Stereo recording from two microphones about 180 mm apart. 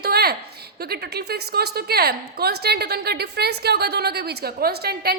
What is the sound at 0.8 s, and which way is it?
A woman's voice, 60° right (ahead or behind).